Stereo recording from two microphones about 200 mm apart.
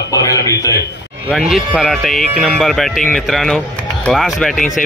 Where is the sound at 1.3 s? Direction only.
Centre (ahead or behind).